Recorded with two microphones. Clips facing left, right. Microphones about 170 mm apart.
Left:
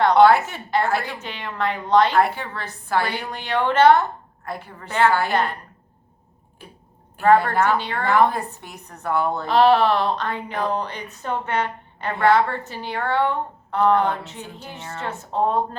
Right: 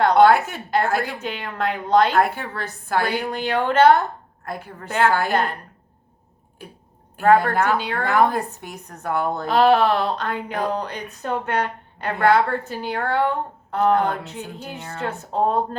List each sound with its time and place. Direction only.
0.1 s speech: 50° right (ahead or behind)
7.2 s speech: 50° right (ahead or behind)
10.5 s speech: 45° right (ahead or behind)
10.9 s speech: 60° right (ahead or behind)
15.3 s speech: 40° right (ahead or behind)